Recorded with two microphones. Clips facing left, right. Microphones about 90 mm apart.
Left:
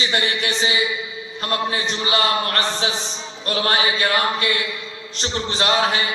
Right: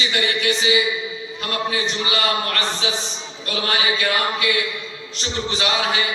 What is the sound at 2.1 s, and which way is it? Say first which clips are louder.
A man's voice: left 4 dB; 35° left (ahead or behind).